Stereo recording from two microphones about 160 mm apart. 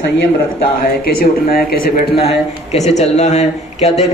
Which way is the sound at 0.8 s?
70° left (ahead or behind).